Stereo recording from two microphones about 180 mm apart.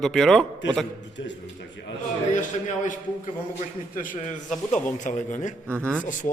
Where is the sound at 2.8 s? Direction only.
45° left (ahead or behind).